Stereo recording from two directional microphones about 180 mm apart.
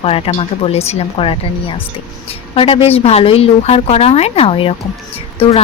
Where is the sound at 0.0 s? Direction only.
30° left (ahead or behind).